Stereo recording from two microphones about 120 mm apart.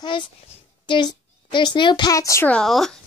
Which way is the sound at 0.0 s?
40° left (ahead or behind).